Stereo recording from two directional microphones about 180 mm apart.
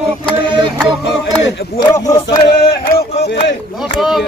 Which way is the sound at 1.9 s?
20° left (ahead or behind).